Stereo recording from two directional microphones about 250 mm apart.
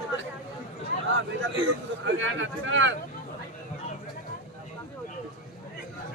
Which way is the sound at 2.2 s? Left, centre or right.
Right.